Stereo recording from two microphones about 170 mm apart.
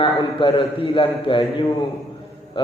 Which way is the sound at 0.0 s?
30° left (ahead or behind).